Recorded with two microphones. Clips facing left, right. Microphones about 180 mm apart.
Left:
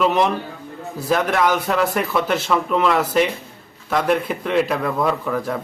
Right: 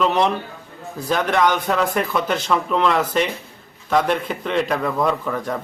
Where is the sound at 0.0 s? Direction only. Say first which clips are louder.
Left 1 dB; 5° left (ahead or behind).